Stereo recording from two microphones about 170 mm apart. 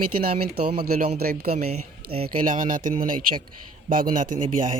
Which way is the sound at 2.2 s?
50° right (ahead or behind).